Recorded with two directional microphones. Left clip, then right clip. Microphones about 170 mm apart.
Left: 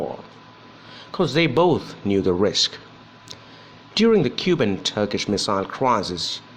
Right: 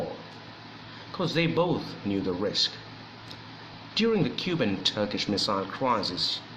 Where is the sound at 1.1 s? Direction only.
45° left (ahead or behind).